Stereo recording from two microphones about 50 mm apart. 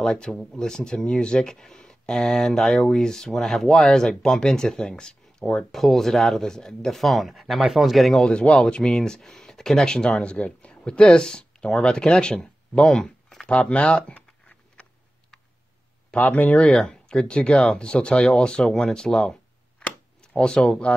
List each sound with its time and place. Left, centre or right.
0.0 s speech: centre
5.7 s speech: centre
8.2 s speech: centre
13.5 s speech: left
14.1 s a sound: left
16.2 s speech: left
16.7 s speech: centre